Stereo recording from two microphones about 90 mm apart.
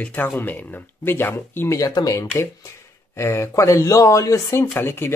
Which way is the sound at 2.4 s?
30° left (ahead or behind).